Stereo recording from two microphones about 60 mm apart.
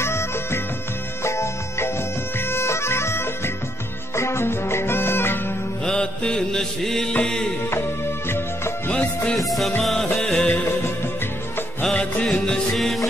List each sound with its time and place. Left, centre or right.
0.0 s music: left
2.5 s bagpipes: left
4.1 s music: left
5.9 s music: centre
8.3 s music: left
9.5 s music: centre
10.1 s music: centre
11.9 s music: centre
12.3 s music: centre